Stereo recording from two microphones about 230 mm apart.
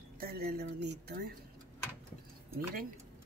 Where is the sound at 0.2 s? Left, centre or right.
Right.